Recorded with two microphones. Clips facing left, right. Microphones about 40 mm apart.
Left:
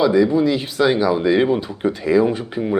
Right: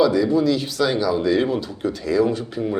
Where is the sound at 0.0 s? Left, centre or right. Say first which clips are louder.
Left 2 dB; left.